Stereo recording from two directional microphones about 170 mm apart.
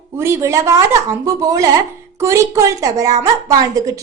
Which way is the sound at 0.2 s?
15° right (ahead or behind).